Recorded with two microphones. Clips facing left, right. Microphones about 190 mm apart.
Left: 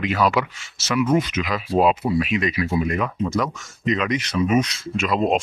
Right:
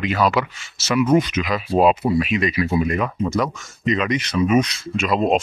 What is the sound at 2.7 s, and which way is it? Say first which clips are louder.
Speech: right 2 dB; 15° right (ahead or behind).